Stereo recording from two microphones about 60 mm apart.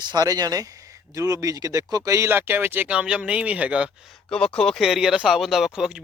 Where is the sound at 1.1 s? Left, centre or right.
Right.